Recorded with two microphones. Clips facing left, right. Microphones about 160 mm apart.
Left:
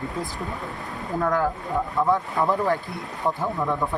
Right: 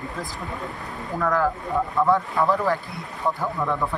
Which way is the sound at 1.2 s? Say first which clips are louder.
Right 1 dB; 20° left (ahead or behind).